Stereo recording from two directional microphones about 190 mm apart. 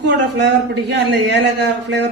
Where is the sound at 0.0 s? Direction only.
65° right (ahead or behind).